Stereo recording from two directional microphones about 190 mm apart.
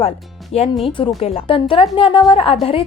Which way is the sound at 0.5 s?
30° left (ahead or behind).